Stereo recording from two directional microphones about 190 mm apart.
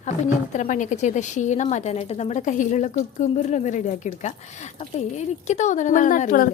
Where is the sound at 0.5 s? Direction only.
40° left (ahead or behind).